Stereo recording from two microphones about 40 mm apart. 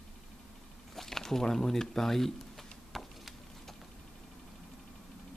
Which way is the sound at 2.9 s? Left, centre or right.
Centre.